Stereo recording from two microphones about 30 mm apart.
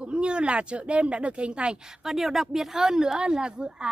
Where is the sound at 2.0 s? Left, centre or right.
Centre; by 3.9 s right.